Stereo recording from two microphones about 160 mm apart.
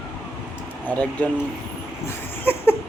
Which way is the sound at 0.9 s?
10° left (ahead or behind).